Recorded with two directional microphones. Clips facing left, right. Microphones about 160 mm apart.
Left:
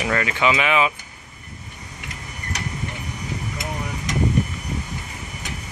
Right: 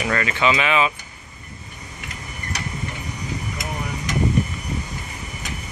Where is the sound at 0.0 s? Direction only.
15° left (ahead or behind).